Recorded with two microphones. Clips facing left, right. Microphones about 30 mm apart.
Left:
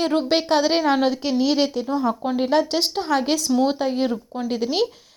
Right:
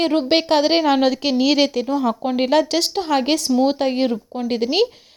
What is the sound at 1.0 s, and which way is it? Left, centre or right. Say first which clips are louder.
A woman's voice: right 3 dB; right.